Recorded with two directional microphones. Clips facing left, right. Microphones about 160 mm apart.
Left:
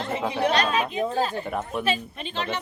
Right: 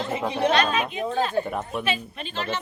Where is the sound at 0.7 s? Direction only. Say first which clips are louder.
Left 1 dB; 35° left (ahead or behind).